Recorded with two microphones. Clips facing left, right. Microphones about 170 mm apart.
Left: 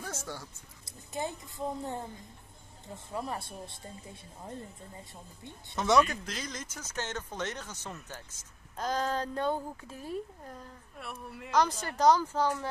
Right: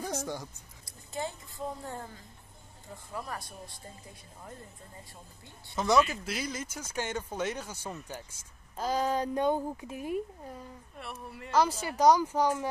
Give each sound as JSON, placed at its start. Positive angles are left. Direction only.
{"t": 0.0, "sound": "speech", "side_deg": -15}
{"t": 0.8, "sound": "a sound", "side_deg": 20}
{"t": 3.1, "sound": "speech", "side_deg": 25}
{"t": 5.8, "sound": "speech", "side_deg": 0}